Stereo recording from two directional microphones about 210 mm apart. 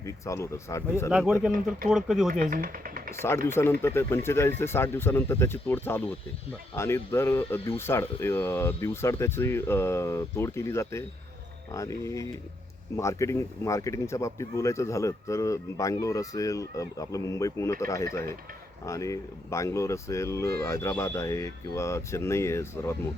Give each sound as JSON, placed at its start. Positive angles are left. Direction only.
{"t": 0.0, "sound": "speech", "side_deg": 15}
{"t": 1.1, "sound": "speech", "side_deg": -5}
{"t": 2.3, "sound": "speech", "side_deg": -40}
{"t": 3.2, "sound": "speech", "side_deg": 10}